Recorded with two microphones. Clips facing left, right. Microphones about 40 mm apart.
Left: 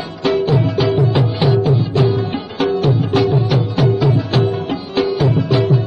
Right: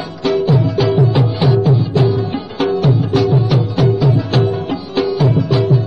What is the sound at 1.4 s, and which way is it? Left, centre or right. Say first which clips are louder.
Music: right 1 dB; centre.